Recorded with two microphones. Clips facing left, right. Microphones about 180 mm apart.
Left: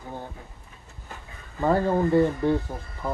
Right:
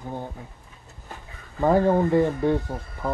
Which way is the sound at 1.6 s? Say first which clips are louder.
Right 3 dB; 15° right (ahead or behind).